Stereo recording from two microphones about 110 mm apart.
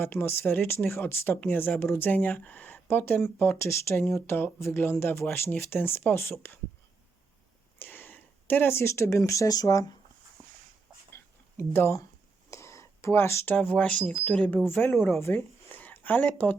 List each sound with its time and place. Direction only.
0.0 s speech: 20° left (ahead or behind)
7.8 s speech: 20° left (ahead or behind); by 9.8 s 35° left (ahead or behind)
11.1 s a sound: 20° left (ahead or behind)
12.5 s speech: 25° left (ahead or behind)